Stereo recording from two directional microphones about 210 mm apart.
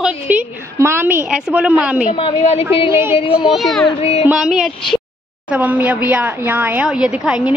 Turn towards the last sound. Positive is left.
turn(degrees=-5)  # may be behind; listen again after turning